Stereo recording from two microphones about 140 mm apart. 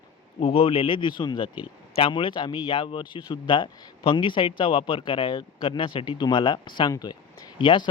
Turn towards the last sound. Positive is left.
turn(degrees=35)  # may be behind; listen again after turning